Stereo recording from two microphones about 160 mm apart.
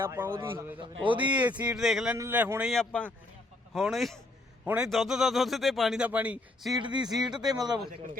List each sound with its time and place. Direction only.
0.0 s speech: 15° right (ahead or behind)
0.8 s a man's voice: 30° right (ahead or behind)
1.3 s speech: 10° right (ahead or behind)
2.1 s a man's voice: 15° right (ahead or behind)
6.8 s speech: 25° right (ahead or behind)